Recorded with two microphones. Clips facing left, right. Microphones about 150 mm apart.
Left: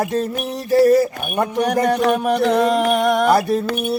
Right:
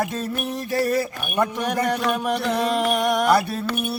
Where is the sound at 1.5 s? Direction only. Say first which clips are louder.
Left 6 dB; 45° left (ahead or behind).